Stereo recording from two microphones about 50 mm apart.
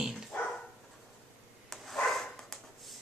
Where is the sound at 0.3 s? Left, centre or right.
Left.